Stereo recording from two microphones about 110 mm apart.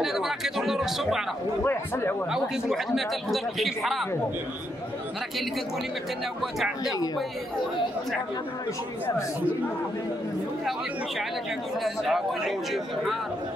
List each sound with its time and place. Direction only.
0.0 s speech: 5° right (ahead or behind)
1.6 s a man's voice: 20° left (ahead or behind)
2.3 s speech: 5° right (ahead or behind)
11.8 s speech: centre (ahead or behind)